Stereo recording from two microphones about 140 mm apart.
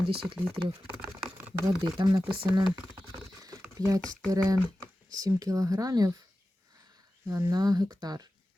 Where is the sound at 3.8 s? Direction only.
25° right (ahead or behind).